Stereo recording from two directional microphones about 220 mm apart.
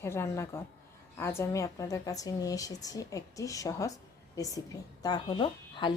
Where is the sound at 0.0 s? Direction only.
10° left (ahead or behind).